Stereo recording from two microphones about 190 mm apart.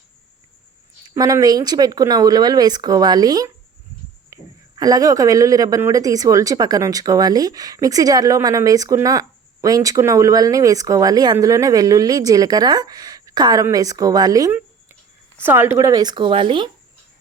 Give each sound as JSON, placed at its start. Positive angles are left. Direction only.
{"t": 1.1, "sound": "a man's voice", "side_deg": -15}